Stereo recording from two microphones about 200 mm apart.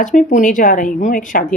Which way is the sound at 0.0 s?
40° left (ahead or behind).